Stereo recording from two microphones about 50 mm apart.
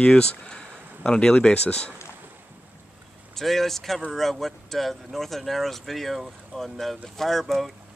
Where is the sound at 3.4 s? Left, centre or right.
Centre.